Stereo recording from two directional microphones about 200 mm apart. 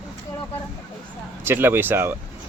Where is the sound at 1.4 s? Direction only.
10° right (ahead or behind).